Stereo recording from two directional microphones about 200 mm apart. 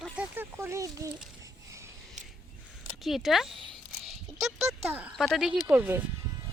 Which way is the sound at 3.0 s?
Centre (ahead or behind).